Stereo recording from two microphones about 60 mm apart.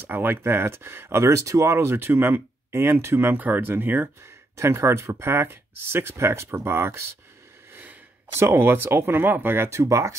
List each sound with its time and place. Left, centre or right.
0.0 s speech: right
3.3 s speech: right
4.6 s speech: right
7.7 s sneeze: right
8.4 s speech: right
9.7 s speech: right